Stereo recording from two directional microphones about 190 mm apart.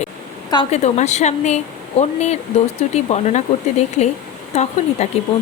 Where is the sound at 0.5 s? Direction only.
30° left (ahead or behind).